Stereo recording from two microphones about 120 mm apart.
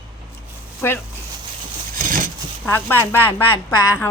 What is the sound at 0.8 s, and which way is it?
Speech, 20° left (ahead or behind).